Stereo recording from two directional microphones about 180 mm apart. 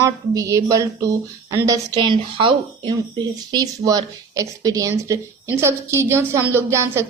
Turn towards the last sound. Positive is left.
turn(degrees=-15)  # may be behind; listen again after turning